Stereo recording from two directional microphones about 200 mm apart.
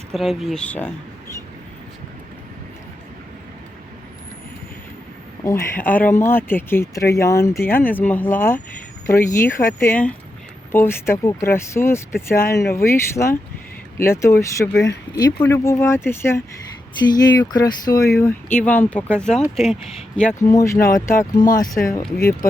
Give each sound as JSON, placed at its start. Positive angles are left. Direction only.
{"t": 0.1, "sound": "speech", "side_deg": 0}
{"t": 5.5, "sound": "speech", "side_deg": 10}
{"t": 20.4, "sound": "speech", "side_deg": 15}